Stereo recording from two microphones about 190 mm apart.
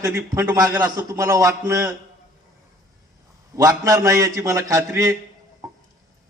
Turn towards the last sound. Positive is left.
turn(degrees=-15)  # may be behind; listen again after turning